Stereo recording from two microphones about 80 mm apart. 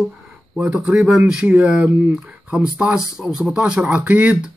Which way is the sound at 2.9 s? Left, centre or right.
Centre.